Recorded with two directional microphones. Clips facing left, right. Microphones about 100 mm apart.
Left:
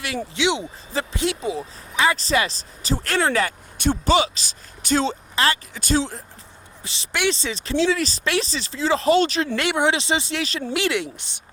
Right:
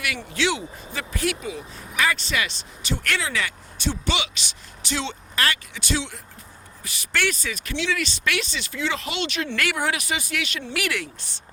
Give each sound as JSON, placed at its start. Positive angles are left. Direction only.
{"t": 0.3, "sound": "speech", "side_deg": 20}
{"t": 3.2, "sound": "speech", "side_deg": 45}
{"t": 5.3, "sound": "speech", "side_deg": 25}
{"t": 5.7, "sound": "speech", "side_deg": 40}
{"t": 6.8, "sound": "speech", "side_deg": 25}
{"t": 10.8, "sound": "speech", "side_deg": 25}